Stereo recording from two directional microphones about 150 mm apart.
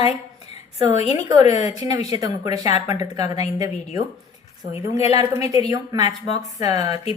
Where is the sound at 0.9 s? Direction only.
45° left (ahead or behind).